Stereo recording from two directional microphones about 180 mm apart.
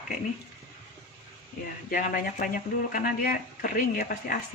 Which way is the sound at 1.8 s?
50° left (ahead or behind).